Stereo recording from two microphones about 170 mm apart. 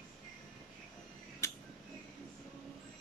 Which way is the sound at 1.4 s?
15° left (ahead or behind).